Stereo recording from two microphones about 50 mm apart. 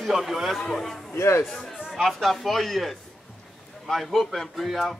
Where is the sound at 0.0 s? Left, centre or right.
Centre.